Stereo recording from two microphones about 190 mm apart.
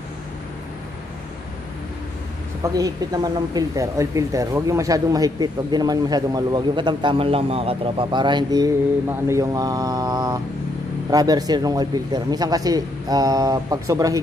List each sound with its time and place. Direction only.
2.6 s speech: 20° right (ahead or behind)